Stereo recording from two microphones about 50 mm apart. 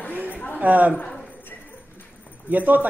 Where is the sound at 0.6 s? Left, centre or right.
Right.